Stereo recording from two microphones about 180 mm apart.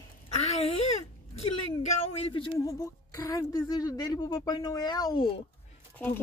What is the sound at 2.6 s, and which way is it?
A woman's voice, 20° left (ahead or behind).